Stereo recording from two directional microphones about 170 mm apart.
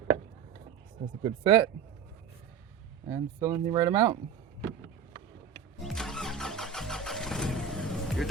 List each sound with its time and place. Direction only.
1.2 s speech: 35° right (ahead or behind)
3.1 s speech: 15° right (ahead or behind)
5.8 s vehicle: centre (ahead or behind)